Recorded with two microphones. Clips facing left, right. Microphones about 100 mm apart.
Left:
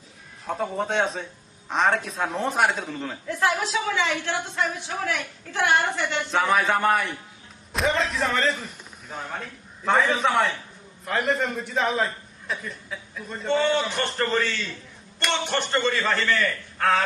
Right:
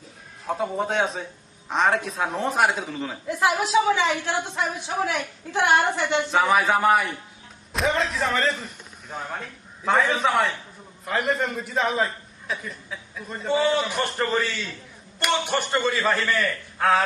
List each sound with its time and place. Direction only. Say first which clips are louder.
0.4 s a man's voice: right 1 dB; centre (ahead or behind)
3.2 s speech: right 2 dB; 15° right (ahead or behind)
6.3 s a man's voice: right 1 dB; 5° right (ahead or behind)